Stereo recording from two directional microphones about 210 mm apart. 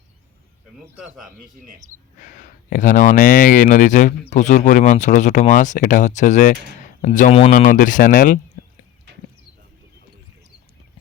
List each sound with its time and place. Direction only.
1.0 s speech: centre (ahead or behind)
2.2 s speech: 40° left (ahead or behind)